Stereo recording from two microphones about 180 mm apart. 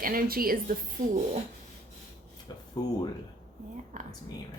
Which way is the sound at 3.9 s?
45° right (ahead or behind).